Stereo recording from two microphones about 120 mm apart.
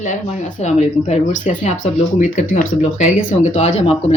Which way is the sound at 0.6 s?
70° left (ahead or behind).